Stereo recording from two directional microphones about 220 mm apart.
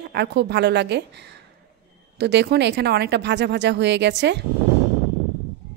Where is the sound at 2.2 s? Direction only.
50° right (ahead or behind).